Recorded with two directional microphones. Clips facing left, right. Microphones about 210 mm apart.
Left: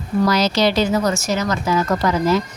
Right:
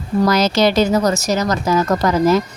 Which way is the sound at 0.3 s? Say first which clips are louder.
Right 3 dB; 45° right (ahead or behind).